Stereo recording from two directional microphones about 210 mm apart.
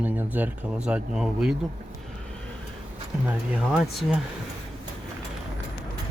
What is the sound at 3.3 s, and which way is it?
Speech, 5° right (ahead or behind).